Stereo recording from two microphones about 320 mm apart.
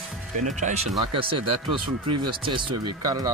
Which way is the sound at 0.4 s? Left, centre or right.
Right.